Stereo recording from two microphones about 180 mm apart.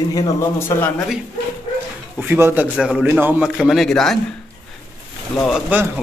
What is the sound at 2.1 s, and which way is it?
A man's voice, 10° right (ahead or behind).